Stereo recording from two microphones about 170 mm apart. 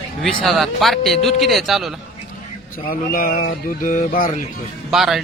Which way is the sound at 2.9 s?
55° left (ahead or behind).